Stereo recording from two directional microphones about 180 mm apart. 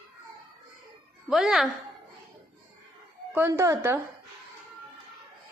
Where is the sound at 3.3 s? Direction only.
10° right (ahead or behind).